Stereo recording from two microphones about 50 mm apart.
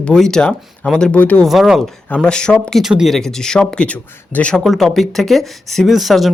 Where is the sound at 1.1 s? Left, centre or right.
Left.